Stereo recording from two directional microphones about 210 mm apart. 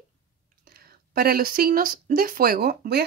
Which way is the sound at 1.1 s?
45° right (ahead or behind).